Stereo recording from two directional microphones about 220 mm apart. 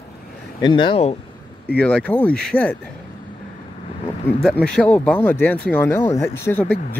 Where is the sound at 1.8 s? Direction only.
5° left (ahead or behind).